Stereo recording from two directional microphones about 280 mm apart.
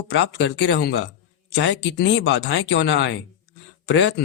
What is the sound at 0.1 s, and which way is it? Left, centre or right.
Speech, left.